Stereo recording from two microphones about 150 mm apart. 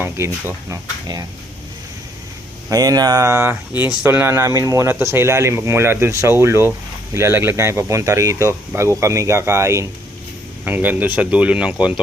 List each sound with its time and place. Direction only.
0.0 s speech: 15° right (ahead or behind)
2.6 s speech: 25° right (ahead or behind)
3.5 s speech: 10° right (ahead or behind)